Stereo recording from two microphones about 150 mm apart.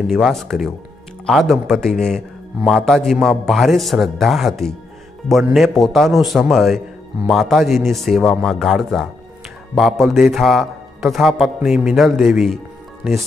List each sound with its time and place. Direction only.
0.0 s a man's voice: centre (ahead or behind)